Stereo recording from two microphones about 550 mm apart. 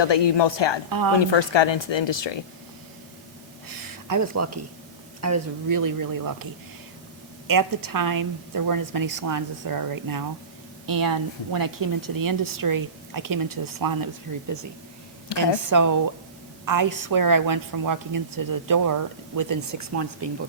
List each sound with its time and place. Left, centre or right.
0.0 s speech: left
0.9 s a woman's voice: right
1.2 s speech: left
4.1 s a woman's voice: right
15.4 s a woman's voice: right